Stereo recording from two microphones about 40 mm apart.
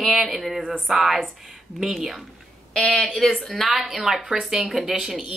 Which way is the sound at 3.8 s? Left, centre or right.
Centre.